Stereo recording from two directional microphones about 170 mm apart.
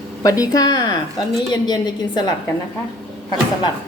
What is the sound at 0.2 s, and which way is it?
A woman's voice, 20° left (ahead or behind).